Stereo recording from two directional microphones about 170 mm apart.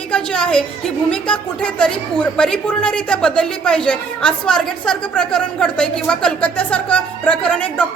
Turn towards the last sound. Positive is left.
turn(degrees=10)  # may be behind; listen again after turning